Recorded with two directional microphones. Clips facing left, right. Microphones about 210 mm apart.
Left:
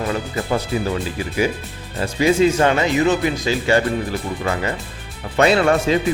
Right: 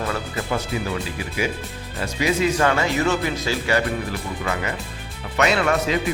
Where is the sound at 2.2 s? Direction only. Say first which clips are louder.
Left 5 dB; 25° left (ahead or behind).